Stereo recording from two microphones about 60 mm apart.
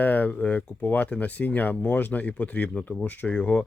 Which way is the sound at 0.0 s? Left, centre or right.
Left.